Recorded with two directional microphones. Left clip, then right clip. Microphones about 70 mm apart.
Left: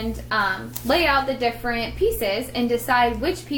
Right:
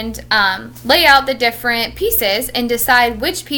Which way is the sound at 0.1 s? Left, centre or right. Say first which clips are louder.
Right 9 dB; right.